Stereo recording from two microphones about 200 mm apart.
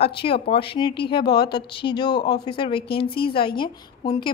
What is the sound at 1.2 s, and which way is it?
Speech, 55° left (ahead or behind).